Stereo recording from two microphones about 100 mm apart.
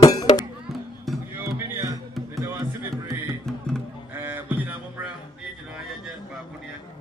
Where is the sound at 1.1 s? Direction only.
Centre (ahead or behind).